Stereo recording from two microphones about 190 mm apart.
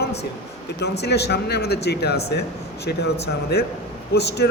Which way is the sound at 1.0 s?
60° left (ahead or behind).